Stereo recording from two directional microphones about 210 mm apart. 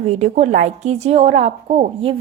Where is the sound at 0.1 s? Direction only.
30° right (ahead or behind).